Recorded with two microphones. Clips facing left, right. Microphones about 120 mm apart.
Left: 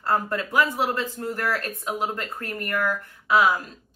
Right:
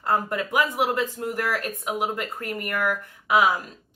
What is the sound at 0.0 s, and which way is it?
Speech, 15° right (ahead or behind).